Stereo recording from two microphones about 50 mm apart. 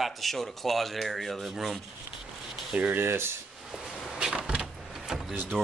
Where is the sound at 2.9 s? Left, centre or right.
Right.